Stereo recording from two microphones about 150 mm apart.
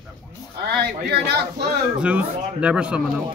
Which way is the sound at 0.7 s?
90° right.